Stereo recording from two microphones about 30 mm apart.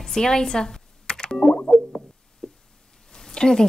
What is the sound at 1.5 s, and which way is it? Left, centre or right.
Music, left.